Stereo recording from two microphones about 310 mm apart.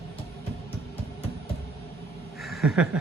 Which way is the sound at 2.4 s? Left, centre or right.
Centre.